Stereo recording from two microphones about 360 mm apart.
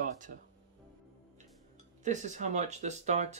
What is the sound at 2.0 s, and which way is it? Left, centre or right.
Speech, centre.